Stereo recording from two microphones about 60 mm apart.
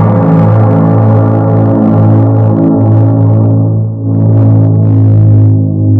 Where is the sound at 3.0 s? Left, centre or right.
Left.